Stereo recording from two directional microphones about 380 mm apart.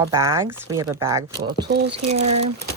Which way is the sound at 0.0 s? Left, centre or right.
Centre.